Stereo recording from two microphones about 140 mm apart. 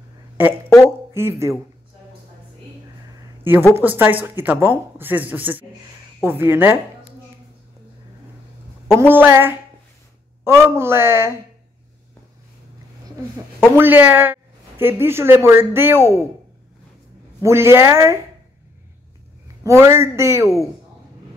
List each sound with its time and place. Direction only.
0.4 s speech: 15° right (ahead or behind)
3.7 s speech: 15° right (ahead or behind)
9.0 s speech: 15° right (ahead or behind)
13.6 s speech: 15° right (ahead or behind)
17.4 s speech: 20° right (ahead or behind)
19.4 s a man's voice: 20° right (ahead or behind)